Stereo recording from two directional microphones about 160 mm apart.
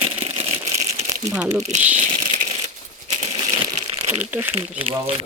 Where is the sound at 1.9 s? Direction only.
50° right (ahead or behind).